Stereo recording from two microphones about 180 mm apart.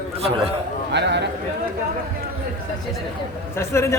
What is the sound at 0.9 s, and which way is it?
Speech, 75° right (ahead or behind).